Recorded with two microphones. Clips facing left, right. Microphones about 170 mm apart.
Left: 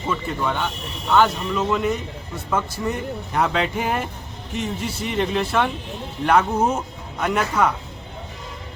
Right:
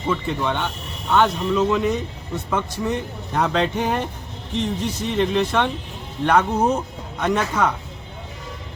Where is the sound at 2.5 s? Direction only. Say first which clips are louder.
Even; 5° left (ahead or behind).